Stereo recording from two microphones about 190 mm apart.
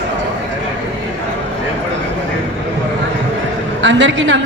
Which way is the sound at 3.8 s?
75° right (ahead or behind).